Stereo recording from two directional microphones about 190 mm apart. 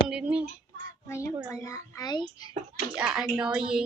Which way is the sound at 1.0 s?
15° left (ahead or behind).